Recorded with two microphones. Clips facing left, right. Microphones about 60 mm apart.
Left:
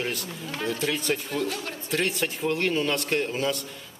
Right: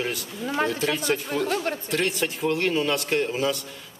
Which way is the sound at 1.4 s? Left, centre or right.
Right.